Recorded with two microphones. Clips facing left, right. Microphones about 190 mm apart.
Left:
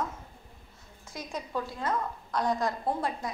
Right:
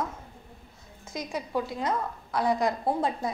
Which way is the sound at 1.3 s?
15° right (ahead or behind).